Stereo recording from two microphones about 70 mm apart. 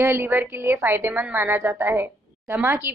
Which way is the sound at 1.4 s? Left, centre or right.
Right.